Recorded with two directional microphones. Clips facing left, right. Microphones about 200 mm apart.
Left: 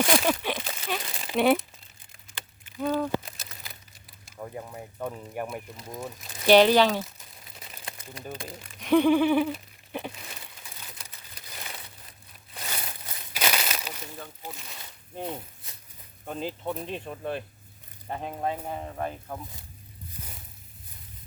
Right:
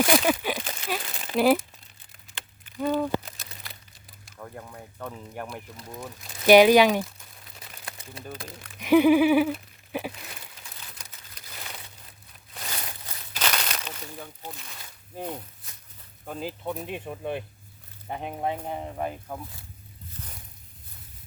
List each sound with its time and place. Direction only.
0.0 s crumpling: 5° right (ahead or behind)
3.0 s a sound: centre (ahead or behind)
4.4 s speech: 10° left (ahead or behind)
6.4 s speech: 10° right (ahead or behind)
8.2 s speech: centre (ahead or behind)
8.8 s a sound: 5° right (ahead or behind)
13.3 s crumpling: 10° left (ahead or behind)
15.1 s speech: 5° right (ahead or behind)